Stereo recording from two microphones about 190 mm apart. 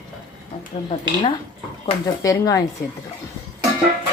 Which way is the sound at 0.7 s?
30° left (ahead or behind).